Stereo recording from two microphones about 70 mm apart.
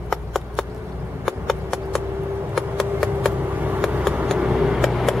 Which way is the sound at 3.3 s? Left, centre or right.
Right.